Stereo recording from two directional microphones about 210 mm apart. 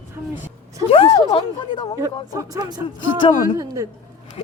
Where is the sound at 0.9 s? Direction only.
25° left (ahead or behind).